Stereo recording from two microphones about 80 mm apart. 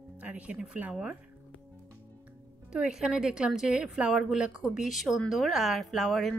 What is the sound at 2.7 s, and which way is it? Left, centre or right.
Speech, centre.